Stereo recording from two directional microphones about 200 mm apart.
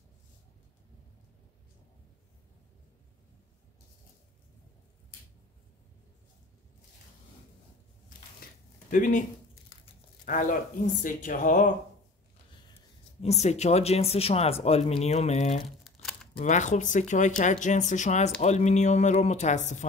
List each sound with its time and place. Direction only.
8.4 s a sound: 45° left (ahead or behind)
8.9 s speech: 40° left (ahead or behind)
10.2 s speech: 40° left (ahead or behind)
13.2 s speech: 35° left (ahead or behind)
15.8 s crumpling: centre (ahead or behind)
16.3 s speech: 35° left (ahead or behind)